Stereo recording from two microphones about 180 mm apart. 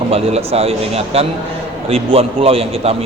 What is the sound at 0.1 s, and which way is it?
A man's voice, 35° right (ahead or behind).